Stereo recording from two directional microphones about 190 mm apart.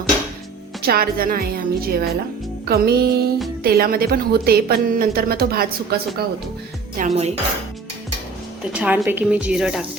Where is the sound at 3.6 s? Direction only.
50° right (ahead or behind).